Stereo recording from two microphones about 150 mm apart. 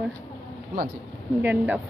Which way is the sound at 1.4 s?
10° right (ahead or behind).